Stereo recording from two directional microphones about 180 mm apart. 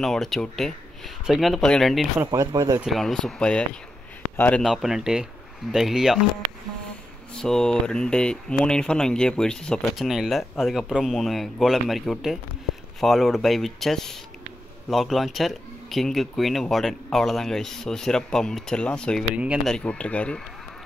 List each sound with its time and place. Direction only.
0.0 s speech: centre (ahead or behind)
2.1 s speech: 15° right (ahead or behind)
2.8 s speech: centre (ahead or behind)
7.3 s speech: 5° left (ahead or behind)
19.3 s speech: 5° right (ahead or behind)